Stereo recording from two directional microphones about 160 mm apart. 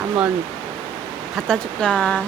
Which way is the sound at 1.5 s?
5° left (ahead or behind).